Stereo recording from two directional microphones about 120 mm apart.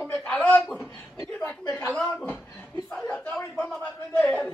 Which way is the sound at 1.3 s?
15° left (ahead or behind).